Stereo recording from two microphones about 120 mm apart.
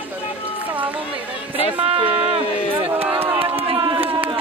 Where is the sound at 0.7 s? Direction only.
15° right (ahead or behind).